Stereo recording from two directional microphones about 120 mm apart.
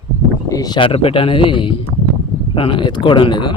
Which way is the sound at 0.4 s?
30° left (ahead or behind).